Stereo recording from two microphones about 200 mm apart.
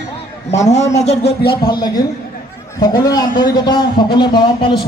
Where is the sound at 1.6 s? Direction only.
20° left (ahead or behind).